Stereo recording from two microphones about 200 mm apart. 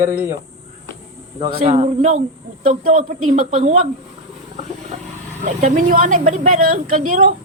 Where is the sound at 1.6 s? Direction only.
35° right (ahead or behind).